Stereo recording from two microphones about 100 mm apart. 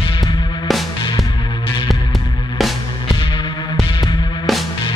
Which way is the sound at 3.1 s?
50° left (ahead or behind).